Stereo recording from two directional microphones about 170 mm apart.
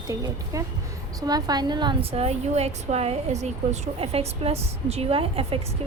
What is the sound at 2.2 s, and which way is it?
Speech, 40° right (ahead or behind).